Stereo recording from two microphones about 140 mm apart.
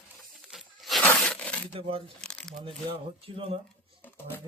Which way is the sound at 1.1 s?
10° left (ahead or behind).